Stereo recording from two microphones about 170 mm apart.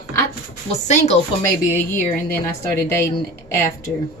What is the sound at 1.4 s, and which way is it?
Speech, 15° left (ahead or behind).